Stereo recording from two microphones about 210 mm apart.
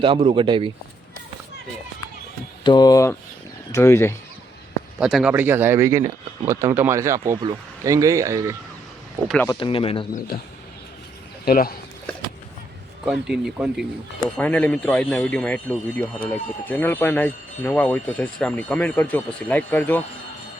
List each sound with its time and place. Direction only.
0.0 s speech: 25° right (ahead or behind)
2.6 s speech: 20° left (ahead or behind)
4.9 s speech: 5° right (ahead or behind)
9.2 s speech: centre (ahead or behind)
9.5 s speech: 25° left (ahead or behind)
11.4 s speech: 45° left (ahead or behind)
13.1 s speech: 5° right (ahead or behind)